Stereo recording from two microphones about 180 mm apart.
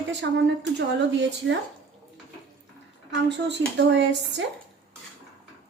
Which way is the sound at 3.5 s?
75° right (ahead or behind).